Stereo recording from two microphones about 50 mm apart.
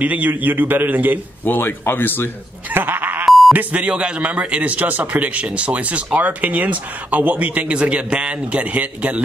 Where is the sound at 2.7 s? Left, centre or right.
Right.